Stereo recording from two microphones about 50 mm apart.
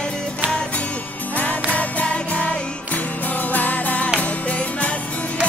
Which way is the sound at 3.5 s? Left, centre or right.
Left.